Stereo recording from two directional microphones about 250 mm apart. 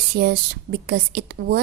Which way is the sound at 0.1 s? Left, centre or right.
Right.